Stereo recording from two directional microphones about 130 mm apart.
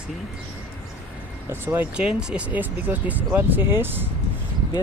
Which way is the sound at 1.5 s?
15° right (ahead or behind).